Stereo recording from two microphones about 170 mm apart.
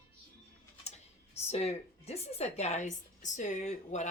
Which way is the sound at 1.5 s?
40° left (ahead or behind).